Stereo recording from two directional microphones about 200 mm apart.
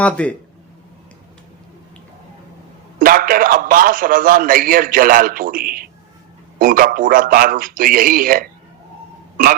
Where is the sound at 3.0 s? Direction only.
45° right (ahead or behind).